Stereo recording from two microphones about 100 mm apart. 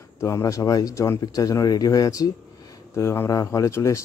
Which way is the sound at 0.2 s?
30° left (ahead or behind).